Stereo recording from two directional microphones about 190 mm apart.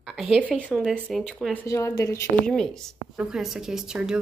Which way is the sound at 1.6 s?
15° left (ahead or behind).